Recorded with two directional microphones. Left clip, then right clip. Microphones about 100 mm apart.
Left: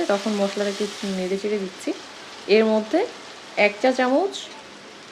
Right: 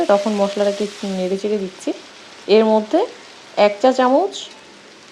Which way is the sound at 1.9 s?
35° right (ahead or behind).